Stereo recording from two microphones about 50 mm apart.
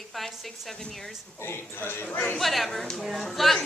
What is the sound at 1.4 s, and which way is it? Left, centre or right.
Speech, left.